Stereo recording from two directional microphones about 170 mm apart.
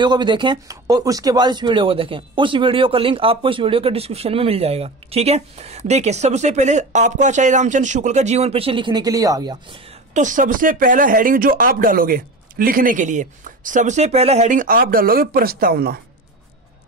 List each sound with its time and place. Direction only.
0.0 s speech: 25° right (ahead or behind)
10.1 s speech: 50° right (ahead or behind)